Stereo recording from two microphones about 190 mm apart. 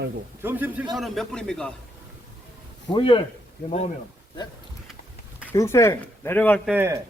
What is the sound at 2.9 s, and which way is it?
Speech, 25° left (ahead or behind).